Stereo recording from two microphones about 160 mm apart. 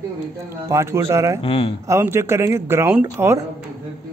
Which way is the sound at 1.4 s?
35° left (ahead or behind).